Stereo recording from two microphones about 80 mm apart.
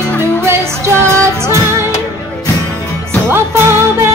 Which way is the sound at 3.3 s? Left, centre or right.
Right.